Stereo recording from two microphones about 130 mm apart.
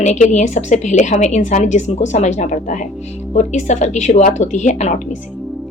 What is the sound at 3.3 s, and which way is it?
Speech, 65° left (ahead or behind).